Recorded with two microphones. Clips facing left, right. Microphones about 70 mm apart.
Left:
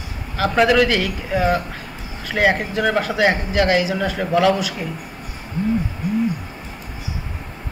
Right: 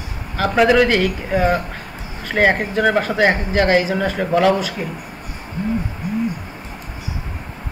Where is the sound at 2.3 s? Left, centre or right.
Right.